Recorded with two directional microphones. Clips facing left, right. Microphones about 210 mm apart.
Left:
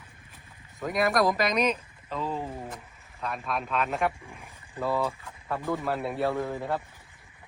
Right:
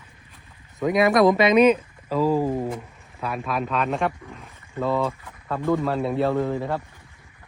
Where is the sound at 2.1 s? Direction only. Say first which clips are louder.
Right 12 dB; 90° right.